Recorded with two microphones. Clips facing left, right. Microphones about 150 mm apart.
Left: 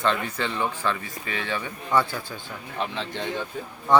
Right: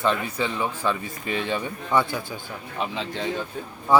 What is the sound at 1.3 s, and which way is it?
Speech, 20° right (ahead or behind).